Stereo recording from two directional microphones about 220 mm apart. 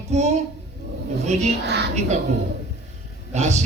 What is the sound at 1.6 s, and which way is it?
Vehicle, 50° right (ahead or behind).